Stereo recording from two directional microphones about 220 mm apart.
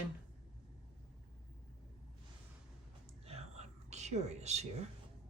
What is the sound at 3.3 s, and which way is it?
Whispering, 30° right (ahead or behind).